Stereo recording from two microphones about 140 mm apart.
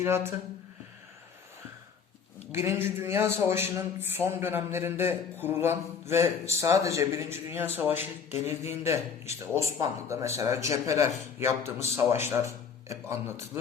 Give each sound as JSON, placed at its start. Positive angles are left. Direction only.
{"t": 0.0, "sound": "a man's voice", "side_deg": -20}
{"t": 2.5, "sound": "a man's voice", "side_deg": -20}